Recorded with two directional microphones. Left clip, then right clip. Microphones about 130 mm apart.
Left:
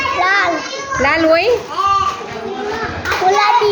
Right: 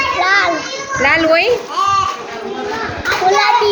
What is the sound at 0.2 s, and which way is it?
Children playing, centre (ahead or behind).